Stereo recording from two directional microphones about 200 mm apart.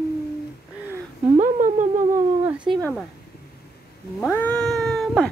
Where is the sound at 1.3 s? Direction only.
40° right (ahead or behind).